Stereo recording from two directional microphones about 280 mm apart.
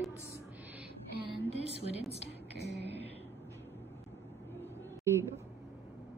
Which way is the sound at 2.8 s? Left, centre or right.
Right.